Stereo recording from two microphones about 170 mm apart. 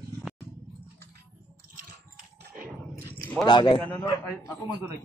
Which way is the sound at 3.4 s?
25° left (ahead or behind).